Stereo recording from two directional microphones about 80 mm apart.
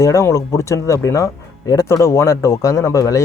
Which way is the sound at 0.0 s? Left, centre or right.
Left.